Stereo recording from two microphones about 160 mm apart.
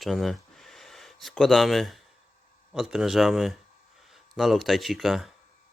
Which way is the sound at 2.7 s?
Centre (ahead or behind).